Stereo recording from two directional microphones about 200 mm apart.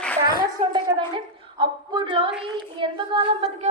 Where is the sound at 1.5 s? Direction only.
25° right (ahead or behind).